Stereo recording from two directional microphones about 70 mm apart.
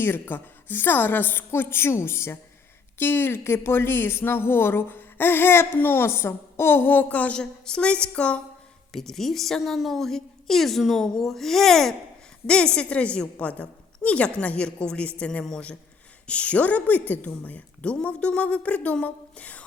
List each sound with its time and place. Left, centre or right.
0.0 s a woman's voice: left
8.9 s a woman's voice: centre